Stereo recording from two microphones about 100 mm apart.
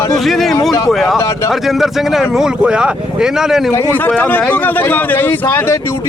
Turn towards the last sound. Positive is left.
turn(degrees=25)  # may be behind; listen again after turning